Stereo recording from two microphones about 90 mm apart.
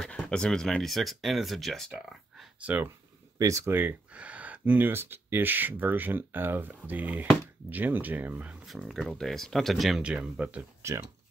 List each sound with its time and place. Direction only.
0.0 s speech: 10° left (ahead or behind)
2.6 s speech: 15° right (ahead or behind)
3.3 s speech: 35° right (ahead or behind)
3.7 s speech: 20° right (ahead or behind)
8.6 s speech: centre (ahead or behind)
10.8 s speech: 30° right (ahead or behind)